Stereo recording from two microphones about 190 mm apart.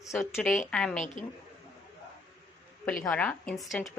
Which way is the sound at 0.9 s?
40° left (ahead or behind).